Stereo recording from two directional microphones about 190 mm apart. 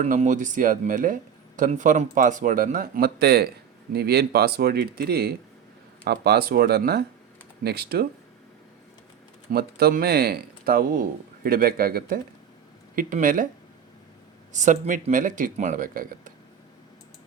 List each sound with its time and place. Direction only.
0.0 s speech: 40° right (ahead or behind); by 8.0 s 55° right (ahead or behind)
9.5 s speech: 55° right (ahead or behind)
14.5 s speech: 40° right (ahead or behind)